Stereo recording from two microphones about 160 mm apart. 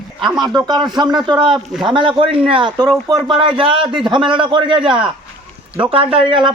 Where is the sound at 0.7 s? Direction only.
25° right (ahead or behind).